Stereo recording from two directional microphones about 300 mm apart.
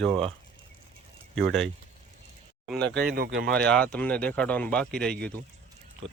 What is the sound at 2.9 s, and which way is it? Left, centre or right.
Speech, right.